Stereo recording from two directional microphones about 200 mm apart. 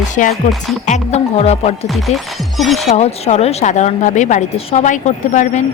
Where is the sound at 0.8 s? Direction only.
35° left (ahead or behind).